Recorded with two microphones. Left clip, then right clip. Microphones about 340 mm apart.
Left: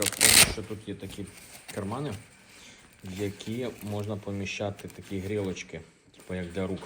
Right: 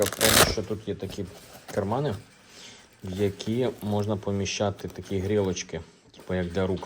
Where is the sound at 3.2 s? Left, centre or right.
Right.